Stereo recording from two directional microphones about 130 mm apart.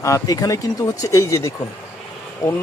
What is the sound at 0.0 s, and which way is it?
Speech, 25° left (ahead or behind).